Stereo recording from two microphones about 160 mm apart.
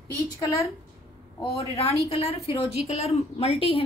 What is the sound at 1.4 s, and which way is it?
A woman's voice, 40° left (ahead or behind).